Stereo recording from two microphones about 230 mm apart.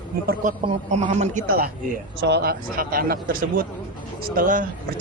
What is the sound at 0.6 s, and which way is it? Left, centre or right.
Speech, right.